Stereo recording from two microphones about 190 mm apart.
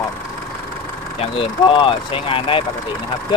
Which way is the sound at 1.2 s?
25° left (ahead or behind).